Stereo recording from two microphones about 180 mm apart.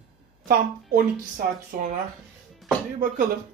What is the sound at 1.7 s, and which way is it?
Speech, 45° right (ahead or behind).